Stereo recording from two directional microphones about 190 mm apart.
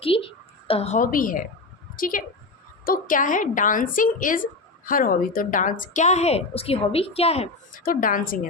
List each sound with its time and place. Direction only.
0.0 s a woman's voice: 30° left (ahead or behind)
7.9 s a woman's voice: 45° left (ahead or behind)